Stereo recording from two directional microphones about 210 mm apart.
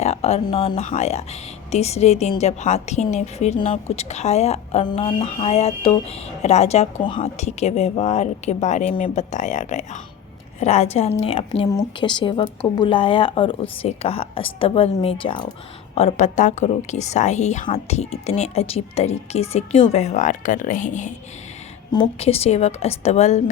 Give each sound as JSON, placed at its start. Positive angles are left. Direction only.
{"t": 0.0, "sound": "speech", "side_deg": 30}